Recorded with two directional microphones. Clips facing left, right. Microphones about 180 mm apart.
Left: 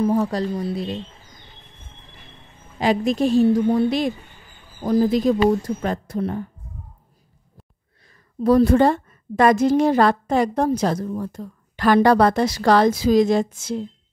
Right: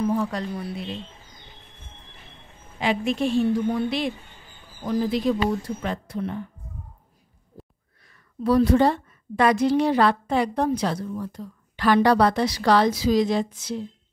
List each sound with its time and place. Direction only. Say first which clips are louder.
0.0 s a woman's voice: left 4 dB; 40° left (ahead or behind)
0.5 s speech: left 6 dB; 25° left (ahead or behind)
2.8 s a woman's voice: left 4 dB; 40° left (ahead or behind)
8.1 s a woman's voice: left 4 dB; 45° left (ahead or behind)